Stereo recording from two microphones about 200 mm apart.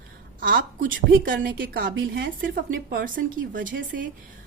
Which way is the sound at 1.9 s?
65° right (ahead or behind).